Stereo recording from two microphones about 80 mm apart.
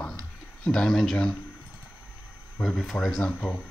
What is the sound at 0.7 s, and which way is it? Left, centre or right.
Speech, centre.